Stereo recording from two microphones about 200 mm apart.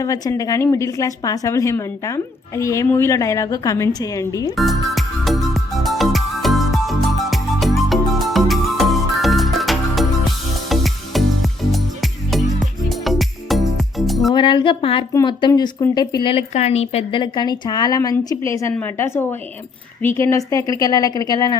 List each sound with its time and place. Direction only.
0.0 s a woman's voice: 15° left (ahead or behind)
4.5 s music: centre (ahead or behind)
12.9 s music: centre (ahead or behind)
14.3 s a woman's voice: 25° left (ahead or behind)